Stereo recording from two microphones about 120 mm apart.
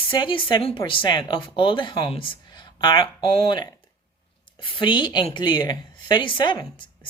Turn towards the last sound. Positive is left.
turn(degrees=40)  # may be behind; listen again after turning